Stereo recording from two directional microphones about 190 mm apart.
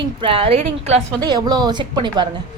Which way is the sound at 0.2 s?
30° right (ahead or behind).